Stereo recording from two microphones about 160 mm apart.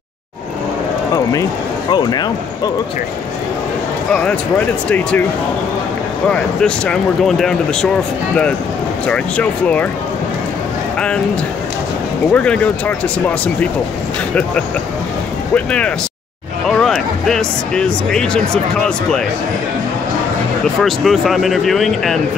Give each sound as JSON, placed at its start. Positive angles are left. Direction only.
{"t": 1.9, "sound": "speech", "side_deg": 25}
{"t": 4.1, "sound": "speech", "side_deg": 5}
{"t": 6.2, "sound": "speech", "side_deg": 5}
{"t": 9.0, "sound": "speech", "side_deg": 10}
{"t": 12.3, "sound": "speech", "side_deg": 10}
{"t": 15.5, "sound": "speech", "side_deg": 5}
{"t": 20.8, "sound": "speech", "side_deg": 0}